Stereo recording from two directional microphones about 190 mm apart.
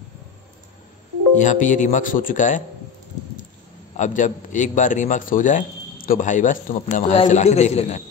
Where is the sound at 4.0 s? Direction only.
40° left (ahead or behind).